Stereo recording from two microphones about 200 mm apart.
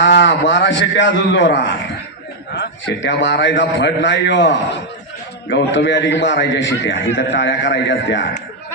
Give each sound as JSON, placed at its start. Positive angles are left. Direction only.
{"t": 0.0, "sound": "a man's voice", "side_deg": 60}